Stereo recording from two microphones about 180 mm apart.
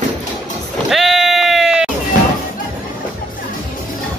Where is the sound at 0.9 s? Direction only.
Centre (ahead or behind).